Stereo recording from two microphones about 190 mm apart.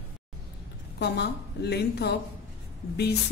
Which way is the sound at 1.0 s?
60° left (ahead or behind).